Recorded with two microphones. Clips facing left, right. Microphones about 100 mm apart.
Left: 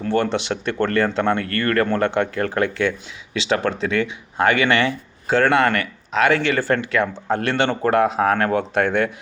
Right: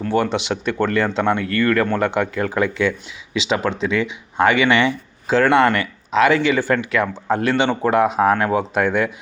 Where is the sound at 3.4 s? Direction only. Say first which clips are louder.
Even; 20° right (ahead or behind).